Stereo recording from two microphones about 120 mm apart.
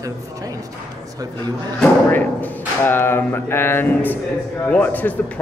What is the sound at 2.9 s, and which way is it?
Speech, 20° left (ahead or behind).